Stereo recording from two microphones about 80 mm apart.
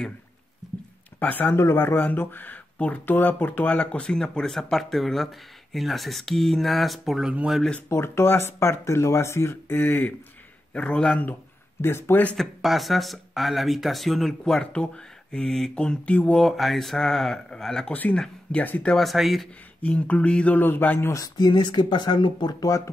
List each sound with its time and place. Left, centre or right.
1.2 s speech: left; by 7.6 s centre
7.9 s speech: left
10.7 s speech: centre
11.8 s speech: left
12.4 s speech: centre
16.4 s speech: centre
18.9 s speech: centre
19.8 s speech: centre
21.1 s speech: left